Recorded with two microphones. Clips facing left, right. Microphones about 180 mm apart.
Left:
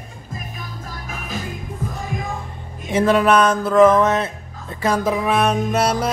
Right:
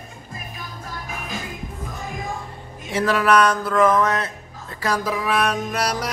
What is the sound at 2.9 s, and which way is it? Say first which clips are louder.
Music: left 3 dB; 20° left (ahead or behind).